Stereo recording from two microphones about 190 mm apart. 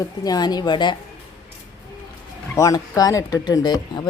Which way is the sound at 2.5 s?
20° left (ahead or behind).